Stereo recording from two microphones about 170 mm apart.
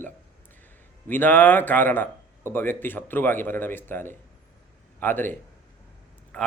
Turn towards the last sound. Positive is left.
turn(degrees=10)  # may be behind; listen again after turning